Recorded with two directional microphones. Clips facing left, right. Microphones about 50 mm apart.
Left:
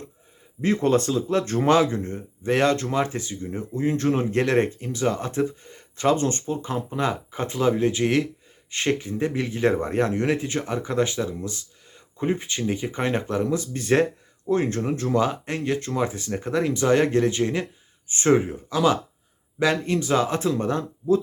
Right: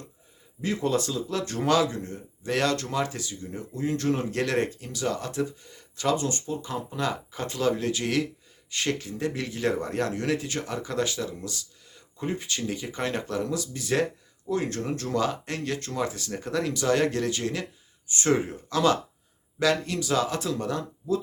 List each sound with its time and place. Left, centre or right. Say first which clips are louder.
0.6 s speech: left 6 dB; left
18.3 s speech: left 4 dB; centre
19.5 s speech: left 3 dB; left